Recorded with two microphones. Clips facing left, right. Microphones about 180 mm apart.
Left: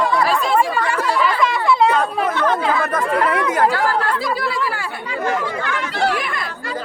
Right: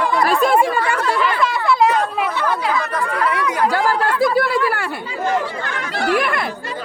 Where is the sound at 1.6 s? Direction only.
25° left (ahead or behind).